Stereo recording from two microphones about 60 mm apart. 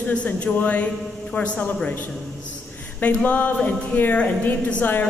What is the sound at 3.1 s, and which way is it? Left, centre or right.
A woman's voice, left.